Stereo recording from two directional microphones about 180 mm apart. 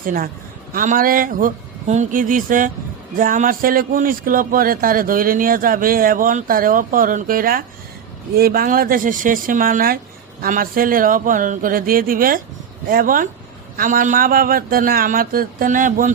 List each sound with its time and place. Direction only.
0.0 s a man's voice: 50° right (ahead or behind)